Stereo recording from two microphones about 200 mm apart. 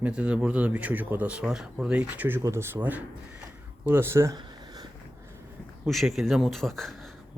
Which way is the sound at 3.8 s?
10° right (ahead or behind).